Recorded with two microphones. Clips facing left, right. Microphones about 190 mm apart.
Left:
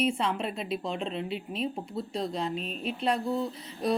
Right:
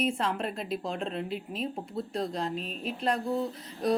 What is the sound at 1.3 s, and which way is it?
Speech, 45° right (ahead or behind).